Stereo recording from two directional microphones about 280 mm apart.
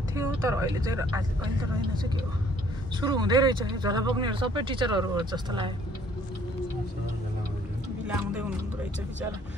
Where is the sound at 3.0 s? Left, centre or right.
Centre.